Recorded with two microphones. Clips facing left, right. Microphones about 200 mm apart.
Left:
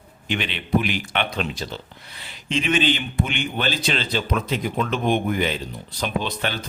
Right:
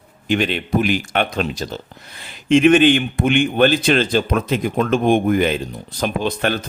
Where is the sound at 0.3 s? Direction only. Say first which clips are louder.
Right 6 dB; 45° right (ahead or behind).